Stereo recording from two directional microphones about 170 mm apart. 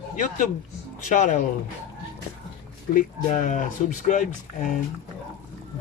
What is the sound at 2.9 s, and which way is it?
Speech, 50° left (ahead or behind).